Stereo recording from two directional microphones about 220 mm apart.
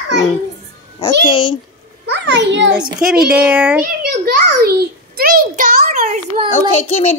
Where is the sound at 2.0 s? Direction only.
50° right (ahead or behind).